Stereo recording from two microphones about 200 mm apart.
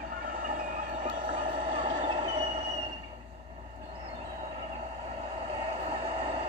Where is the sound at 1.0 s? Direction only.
25° right (ahead or behind).